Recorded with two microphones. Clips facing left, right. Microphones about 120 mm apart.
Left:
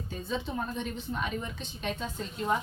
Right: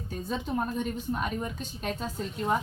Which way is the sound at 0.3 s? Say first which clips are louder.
Right 3 dB; 45° right (ahead or behind).